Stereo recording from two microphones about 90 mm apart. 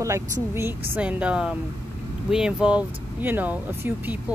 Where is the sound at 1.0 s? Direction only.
15° right (ahead or behind).